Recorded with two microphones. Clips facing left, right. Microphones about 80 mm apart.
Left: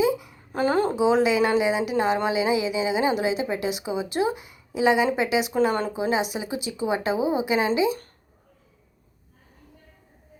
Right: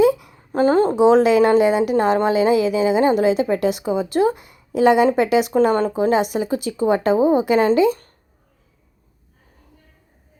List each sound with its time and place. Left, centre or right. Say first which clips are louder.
0.0 s a sound: right 7 dB; right
0.5 s a woman's voice: right 6 dB; right
0.9 s a woman's voice: right 8 dB; right